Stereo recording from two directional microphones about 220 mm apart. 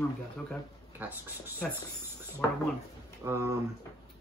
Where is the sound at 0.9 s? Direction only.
10° right (ahead or behind).